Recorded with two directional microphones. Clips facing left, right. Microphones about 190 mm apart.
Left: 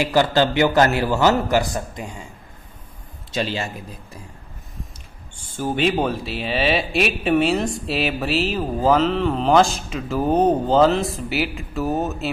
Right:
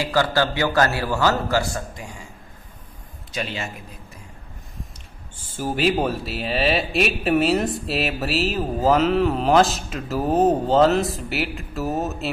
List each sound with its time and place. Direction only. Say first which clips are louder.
0.0 s a man's voice: left 3 dB; 20° left (ahead or behind)
3.3 s speech: left 5 dB; 30° left (ahead or behind)
5.6 s speech: left 1 dB; centre (ahead or behind)